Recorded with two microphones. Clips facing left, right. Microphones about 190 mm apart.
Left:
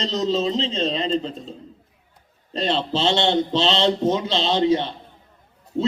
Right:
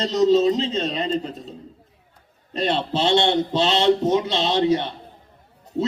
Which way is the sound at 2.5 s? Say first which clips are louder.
Even; 25° left (ahead or behind).